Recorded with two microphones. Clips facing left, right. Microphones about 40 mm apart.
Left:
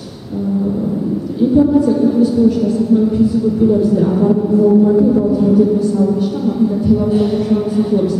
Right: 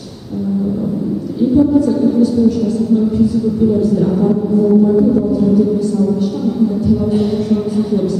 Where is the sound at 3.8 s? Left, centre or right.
Centre.